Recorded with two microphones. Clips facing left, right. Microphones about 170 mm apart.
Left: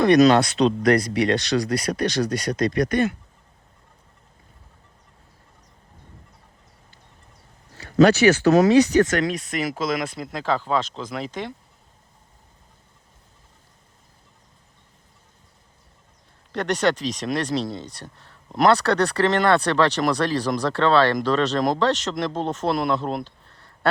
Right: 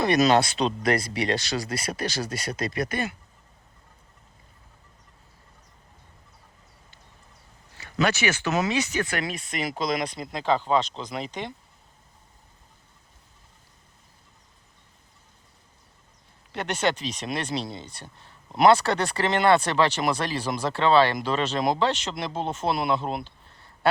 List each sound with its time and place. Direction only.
0.0 s speech: 5° right (ahead or behind)
7.8 s speech: 45° left (ahead or behind)
9.1 s speech: 5° right (ahead or behind)
16.5 s speech: 5° right (ahead or behind)